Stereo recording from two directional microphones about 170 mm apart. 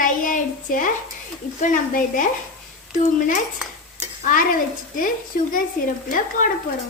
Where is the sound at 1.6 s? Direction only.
50° left (ahead or behind).